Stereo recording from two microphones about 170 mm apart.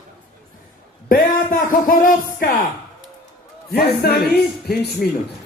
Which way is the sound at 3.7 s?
65° left (ahead or behind).